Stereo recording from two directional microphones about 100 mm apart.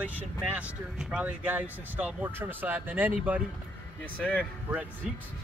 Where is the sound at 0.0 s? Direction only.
15° right (ahead or behind).